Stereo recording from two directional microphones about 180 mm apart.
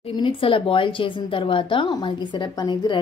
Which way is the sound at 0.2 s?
30° left (ahead or behind).